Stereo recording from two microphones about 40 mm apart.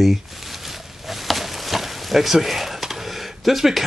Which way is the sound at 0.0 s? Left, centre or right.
Centre.